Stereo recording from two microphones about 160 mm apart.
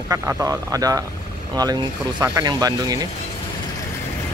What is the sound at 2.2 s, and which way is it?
Speech, 25° right (ahead or behind).